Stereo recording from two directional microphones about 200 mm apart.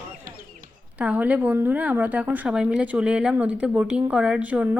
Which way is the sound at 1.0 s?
5° right (ahead or behind).